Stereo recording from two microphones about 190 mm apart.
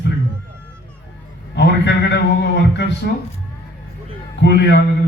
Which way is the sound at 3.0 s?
55° left (ahead or behind).